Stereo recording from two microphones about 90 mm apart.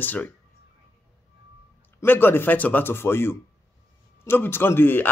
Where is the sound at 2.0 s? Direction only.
25° left (ahead or behind).